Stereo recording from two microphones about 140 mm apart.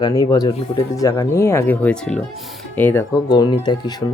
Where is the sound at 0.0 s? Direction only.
25° left (ahead or behind).